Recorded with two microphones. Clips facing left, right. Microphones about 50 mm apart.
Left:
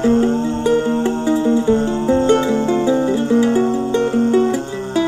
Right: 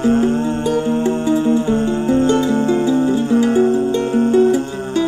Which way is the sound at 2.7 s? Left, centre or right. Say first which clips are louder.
Right 1 dB; left.